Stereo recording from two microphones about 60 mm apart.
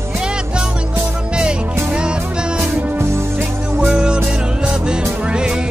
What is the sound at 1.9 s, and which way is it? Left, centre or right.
Music, centre.